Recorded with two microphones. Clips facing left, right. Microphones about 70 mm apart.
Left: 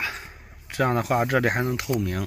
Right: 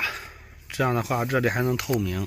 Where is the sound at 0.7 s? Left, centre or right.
Left.